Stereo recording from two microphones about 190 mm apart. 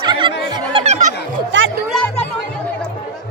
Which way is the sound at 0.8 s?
35° right (ahead or behind).